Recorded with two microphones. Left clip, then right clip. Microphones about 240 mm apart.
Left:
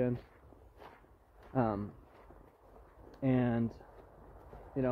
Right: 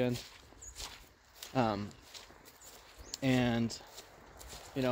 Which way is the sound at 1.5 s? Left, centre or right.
Right.